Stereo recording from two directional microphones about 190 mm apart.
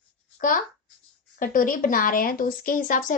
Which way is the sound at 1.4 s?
45° left (ahead or behind).